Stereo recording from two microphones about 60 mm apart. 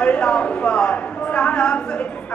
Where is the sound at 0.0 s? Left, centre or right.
Centre.